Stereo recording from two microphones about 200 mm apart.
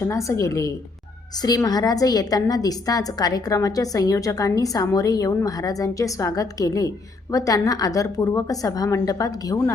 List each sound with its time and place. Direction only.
0.0 s a woman's voice: 15° left (ahead or behind)